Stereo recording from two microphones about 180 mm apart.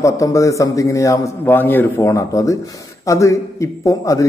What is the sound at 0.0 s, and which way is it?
A man's voice, 15° left (ahead or behind).